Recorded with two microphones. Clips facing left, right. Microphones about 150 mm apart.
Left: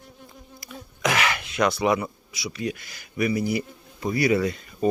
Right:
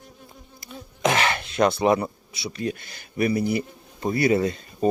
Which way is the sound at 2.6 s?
30° right (ahead or behind).